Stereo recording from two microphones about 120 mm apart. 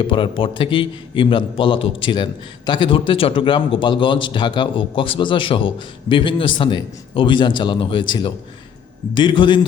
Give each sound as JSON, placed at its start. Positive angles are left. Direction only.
{"t": 0.0, "sound": "a man's voice", "side_deg": 45}